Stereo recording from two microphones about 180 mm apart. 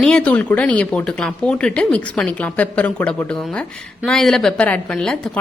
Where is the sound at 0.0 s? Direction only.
5° left (ahead or behind).